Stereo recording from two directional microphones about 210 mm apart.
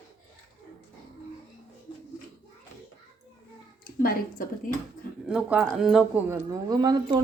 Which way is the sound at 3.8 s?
45° left (ahead or behind).